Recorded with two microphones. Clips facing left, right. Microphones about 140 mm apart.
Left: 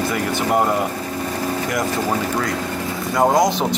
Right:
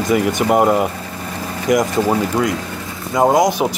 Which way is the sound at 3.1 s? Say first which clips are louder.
Right 3 dB; 20° right (ahead or behind).